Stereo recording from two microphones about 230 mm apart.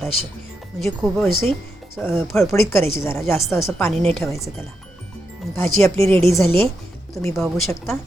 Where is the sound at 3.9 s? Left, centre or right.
Right.